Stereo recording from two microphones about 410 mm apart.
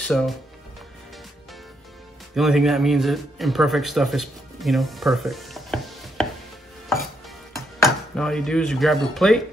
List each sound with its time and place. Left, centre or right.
0.0 s speech: centre
2.3 s speech: centre
7.5 s speech: centre